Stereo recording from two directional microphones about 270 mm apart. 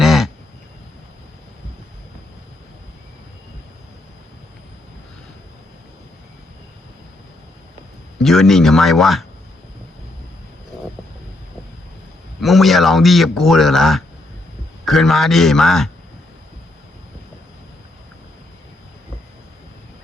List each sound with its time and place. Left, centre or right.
0.0 s duck: centre
8.2 s speech: centre
12.4 s speech: centre